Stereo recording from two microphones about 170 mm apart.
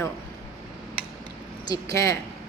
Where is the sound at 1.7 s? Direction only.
20° left (ahead or behind).